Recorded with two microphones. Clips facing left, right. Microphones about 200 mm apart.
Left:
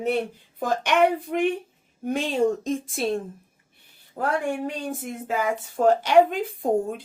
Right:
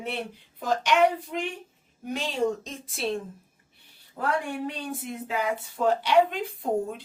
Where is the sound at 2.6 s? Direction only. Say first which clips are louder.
Left 6 dB; 45° left (ahead or behind).